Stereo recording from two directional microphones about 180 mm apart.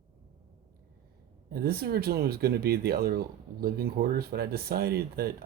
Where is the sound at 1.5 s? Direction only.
60° right (ahead or behind).